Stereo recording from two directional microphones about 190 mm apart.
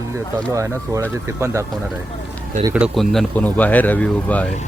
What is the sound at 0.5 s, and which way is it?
Speech, 15° right (ahead or behind).